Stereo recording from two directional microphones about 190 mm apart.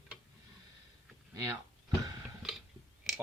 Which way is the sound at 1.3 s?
15° right (ahead or behind).